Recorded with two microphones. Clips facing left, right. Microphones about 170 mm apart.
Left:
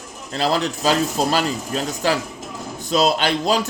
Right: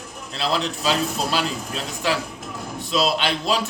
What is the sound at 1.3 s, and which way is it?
Speech, 40° left (ahead or behind).